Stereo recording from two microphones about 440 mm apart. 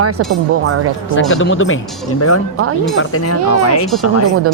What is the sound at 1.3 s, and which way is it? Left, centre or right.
Speech, left.